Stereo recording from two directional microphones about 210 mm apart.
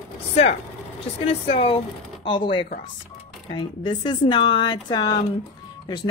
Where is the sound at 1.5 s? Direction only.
25° left (ahead or behind).